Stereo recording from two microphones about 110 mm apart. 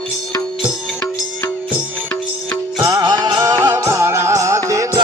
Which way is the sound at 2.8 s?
35° right (ahead or behind).